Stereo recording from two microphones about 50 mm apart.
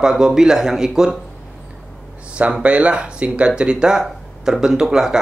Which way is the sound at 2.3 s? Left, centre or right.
Right.